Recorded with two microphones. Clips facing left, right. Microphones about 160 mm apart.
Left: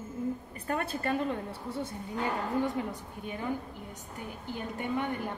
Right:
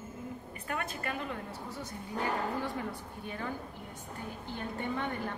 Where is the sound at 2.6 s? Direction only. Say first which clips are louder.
Left 4 dB; 20° left (ahead or behind).